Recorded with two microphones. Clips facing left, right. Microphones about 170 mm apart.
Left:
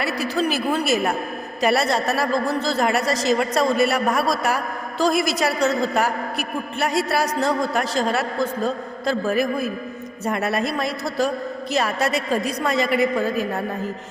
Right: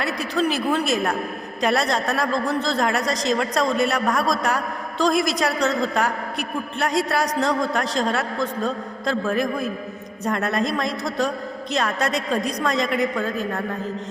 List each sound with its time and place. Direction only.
0.0 s a woman's voice: 5° left (ahead or behind)